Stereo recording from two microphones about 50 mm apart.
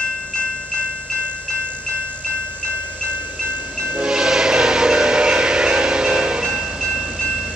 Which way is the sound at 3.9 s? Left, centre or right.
Centre.